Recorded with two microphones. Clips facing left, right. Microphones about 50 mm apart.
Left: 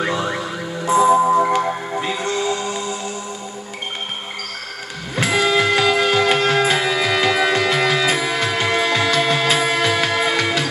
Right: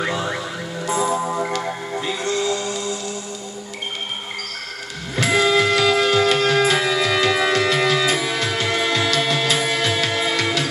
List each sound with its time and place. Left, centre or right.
0.0 s music: centre
5.1 s music: centre